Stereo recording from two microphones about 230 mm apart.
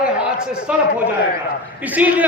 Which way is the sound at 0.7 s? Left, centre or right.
Centre.